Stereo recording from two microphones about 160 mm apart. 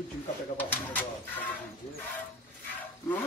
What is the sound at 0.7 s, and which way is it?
Speech, 10° left (ahead or behind).